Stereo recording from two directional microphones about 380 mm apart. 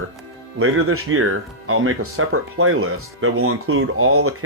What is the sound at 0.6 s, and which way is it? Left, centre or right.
Speech, right.